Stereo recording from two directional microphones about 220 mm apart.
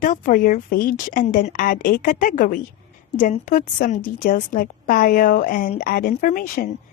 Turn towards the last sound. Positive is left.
turn(degrees=40)  # may be behind; listen again after turning